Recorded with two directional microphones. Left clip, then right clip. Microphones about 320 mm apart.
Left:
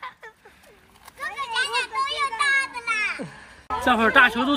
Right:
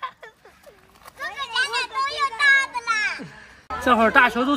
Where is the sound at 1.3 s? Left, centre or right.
Right.